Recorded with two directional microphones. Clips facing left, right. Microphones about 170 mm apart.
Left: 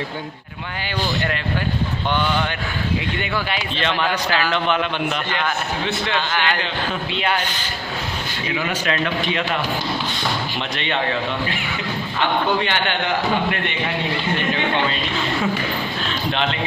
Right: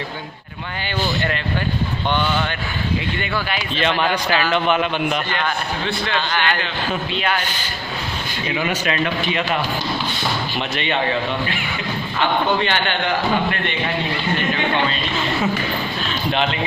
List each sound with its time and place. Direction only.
3.7 s a man's voice: 10° right (ahead or behind)
5.9 s a man's voice: 20° left (ahead or behind)
8.6 s a man's voice: 15° right (ahead or behind)